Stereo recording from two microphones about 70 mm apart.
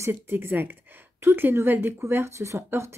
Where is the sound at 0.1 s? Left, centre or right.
Right.